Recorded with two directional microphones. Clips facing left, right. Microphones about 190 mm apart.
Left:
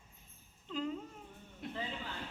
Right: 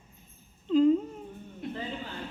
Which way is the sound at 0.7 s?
25° right (ahead or behind).